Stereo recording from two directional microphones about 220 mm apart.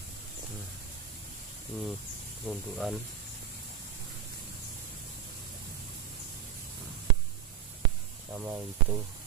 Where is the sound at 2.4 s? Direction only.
Centre (ahead or behind).